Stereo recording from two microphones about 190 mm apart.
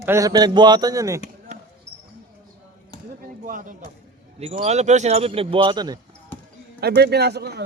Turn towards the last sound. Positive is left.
turn(degrees=-60)  # may be behind; listen again after turning